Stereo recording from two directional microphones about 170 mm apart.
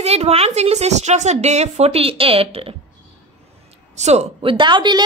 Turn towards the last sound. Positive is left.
turn(degrees=-25)  # may be behind; listen again after turning